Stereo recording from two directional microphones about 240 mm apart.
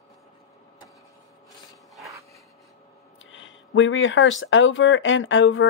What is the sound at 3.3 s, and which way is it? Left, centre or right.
Speech, left.